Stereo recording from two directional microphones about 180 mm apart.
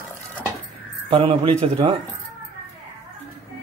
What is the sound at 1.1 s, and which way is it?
Speech, 30° right (ahead or behind).